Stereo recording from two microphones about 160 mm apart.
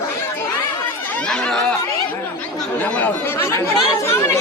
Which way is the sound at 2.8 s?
10° left (ahead or behind).